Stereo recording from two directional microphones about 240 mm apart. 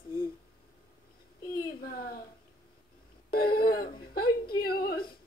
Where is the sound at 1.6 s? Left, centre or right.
Left.